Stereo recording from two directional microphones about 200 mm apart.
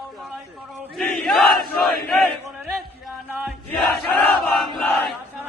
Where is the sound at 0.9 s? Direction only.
Centre (ahead or behind).